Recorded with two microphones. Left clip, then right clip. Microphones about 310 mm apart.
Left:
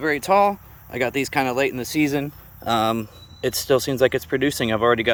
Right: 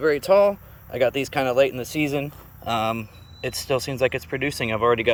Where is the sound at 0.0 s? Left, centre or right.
Centre.